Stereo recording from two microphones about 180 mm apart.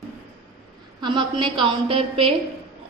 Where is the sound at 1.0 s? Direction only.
25° right (ahead or behind).